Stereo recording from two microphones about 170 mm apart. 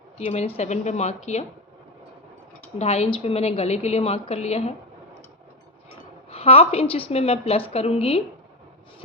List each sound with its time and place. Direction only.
0.3 s a woman's voice: 40° left (ahead or behind)
2.7 s a woman's voice: 35° left (ahead or behind)
6.3 s a woman's voice: 35° left (ahead or behind)